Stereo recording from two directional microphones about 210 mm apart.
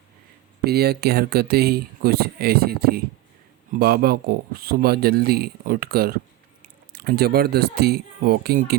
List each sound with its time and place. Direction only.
0.6 s speech: 50° right (ahead or behind)